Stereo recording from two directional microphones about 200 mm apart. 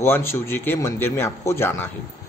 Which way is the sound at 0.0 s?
10° left (ahead or behind).